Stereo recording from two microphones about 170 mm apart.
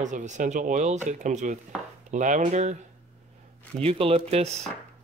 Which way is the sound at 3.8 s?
35° right (ahead or behind).